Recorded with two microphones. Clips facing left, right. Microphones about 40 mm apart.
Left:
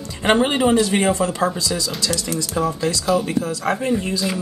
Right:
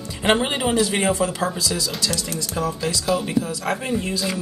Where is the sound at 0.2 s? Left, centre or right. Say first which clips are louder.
Left 3 dB; centre.